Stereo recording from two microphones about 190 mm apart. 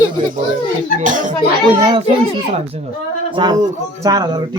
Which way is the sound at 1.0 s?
45° right (ahead or behind).